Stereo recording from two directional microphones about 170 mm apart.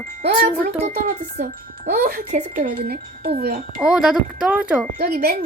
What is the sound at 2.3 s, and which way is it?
Speech, 55° right (ahead or behind).